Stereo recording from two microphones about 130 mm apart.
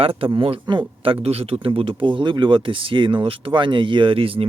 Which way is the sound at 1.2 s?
50° right (ahead or behind).